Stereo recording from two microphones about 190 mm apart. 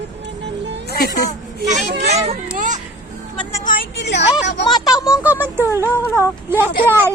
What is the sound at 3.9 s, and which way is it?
Speech, 65° left (ahead or behind).